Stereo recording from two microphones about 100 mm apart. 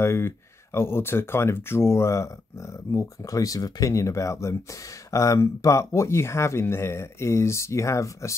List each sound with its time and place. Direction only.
0.0 s speech: 25° left (ahead or behind)